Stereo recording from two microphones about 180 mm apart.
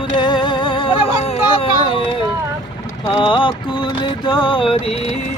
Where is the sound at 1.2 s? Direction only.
30° left (ahead or behind).